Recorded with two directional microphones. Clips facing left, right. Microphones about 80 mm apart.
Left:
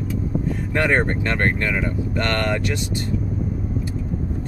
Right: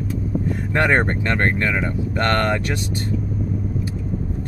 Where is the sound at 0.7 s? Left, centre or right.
Right.